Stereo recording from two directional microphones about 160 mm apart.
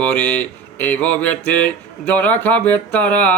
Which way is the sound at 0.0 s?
10° left (ahead or behind).